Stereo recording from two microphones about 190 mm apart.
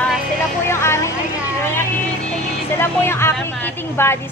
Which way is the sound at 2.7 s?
10° left (ahead or behind).